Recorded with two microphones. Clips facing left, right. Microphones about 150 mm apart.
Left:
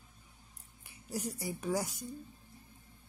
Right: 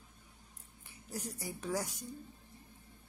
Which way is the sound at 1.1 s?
10° left (ahead or behind).